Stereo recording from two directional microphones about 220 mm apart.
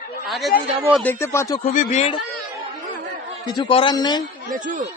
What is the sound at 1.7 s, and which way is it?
Speech, 35° left (ahead or behind).